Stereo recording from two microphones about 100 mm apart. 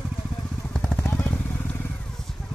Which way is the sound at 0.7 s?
5° left (ahead or behind).